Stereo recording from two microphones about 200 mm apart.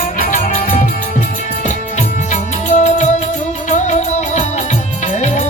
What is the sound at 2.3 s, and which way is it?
Music, 35° left (ahead or behind).